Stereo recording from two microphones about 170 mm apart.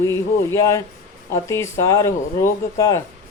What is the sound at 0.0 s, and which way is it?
Speech, 15° left (ahead or behind).